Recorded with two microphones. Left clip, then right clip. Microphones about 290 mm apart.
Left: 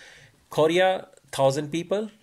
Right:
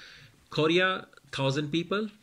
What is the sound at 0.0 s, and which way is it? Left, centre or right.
Speech, centre.